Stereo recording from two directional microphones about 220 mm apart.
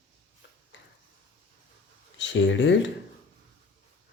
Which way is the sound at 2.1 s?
55° left (ahead or behind).